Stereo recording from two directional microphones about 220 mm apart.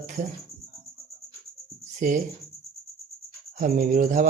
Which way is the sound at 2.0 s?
35° right (ahead or behind).